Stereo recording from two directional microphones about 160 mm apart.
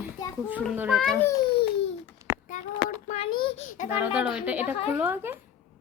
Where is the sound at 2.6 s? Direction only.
50° left (ahead or behind).